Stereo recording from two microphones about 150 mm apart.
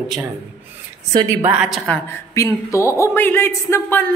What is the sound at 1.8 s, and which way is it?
Speech, 15° left (ahead or behind).